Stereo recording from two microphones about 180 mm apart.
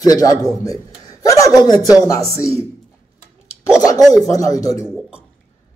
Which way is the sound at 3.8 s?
20° left (ahead or behind).